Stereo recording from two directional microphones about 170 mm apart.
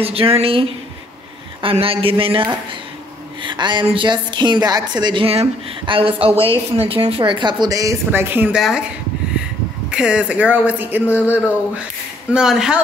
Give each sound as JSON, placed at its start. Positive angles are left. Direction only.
{"t": 0.0, "sound": "a man's voice", "side_deg": -35}
{"t": 3.4, "sound": "a woman's voice", "side_deg": -25}
{"t": 9.8, "sound": "speech", "side_deg": -5}
{"t": 12.3, "sound": "speech", "side_deg": -5}